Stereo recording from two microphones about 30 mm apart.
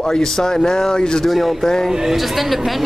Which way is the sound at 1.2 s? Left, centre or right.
Centre.